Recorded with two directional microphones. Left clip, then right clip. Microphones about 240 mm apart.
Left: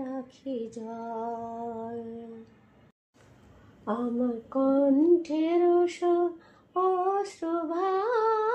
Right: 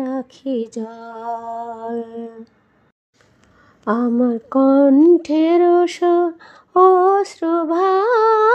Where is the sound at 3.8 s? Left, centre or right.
Right.